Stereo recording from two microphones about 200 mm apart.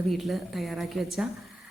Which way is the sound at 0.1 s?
Centre (ahead or behind).